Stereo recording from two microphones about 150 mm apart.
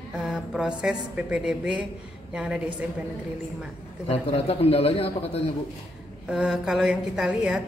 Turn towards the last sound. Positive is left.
turn(degrees=-5)  # may be behind; listen again after turning